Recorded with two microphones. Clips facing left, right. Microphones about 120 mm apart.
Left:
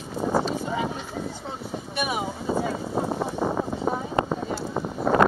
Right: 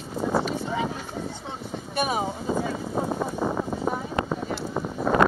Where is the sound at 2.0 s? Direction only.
35° right (ahead or behind).